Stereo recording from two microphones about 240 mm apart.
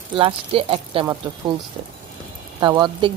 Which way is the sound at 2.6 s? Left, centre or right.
Centre.